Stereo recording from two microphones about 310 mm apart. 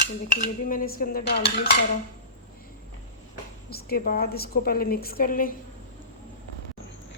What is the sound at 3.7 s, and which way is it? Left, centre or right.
Dishes, left.